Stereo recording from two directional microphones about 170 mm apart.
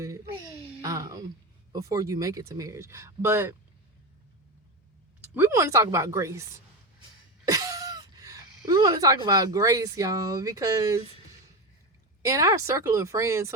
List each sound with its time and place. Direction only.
0.6 s a sound: 20° right (ahead or behind)
1.7 s speech: 20° right (ahead or behind)
5.2 s speech: 10° right (ahead or behind)
7.4 s speech: 20° right (ahead or behind)
12.2 s speech: 20° right (ahead or behind)